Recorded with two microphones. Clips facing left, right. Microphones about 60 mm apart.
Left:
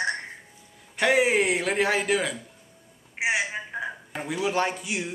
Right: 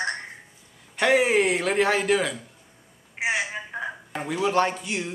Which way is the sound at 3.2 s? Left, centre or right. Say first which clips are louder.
Even; centre.